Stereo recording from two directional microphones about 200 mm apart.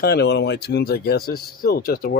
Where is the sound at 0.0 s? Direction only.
55° left (ahead or behind).